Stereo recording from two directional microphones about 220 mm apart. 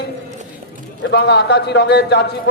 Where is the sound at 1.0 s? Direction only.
50° left (ahead or behind).